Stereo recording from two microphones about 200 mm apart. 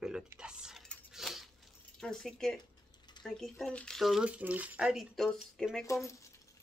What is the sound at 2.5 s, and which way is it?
Mechanisms, 20° left (ahead or behind).